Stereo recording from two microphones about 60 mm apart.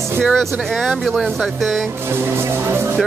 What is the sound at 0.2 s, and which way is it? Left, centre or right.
Speech, centre.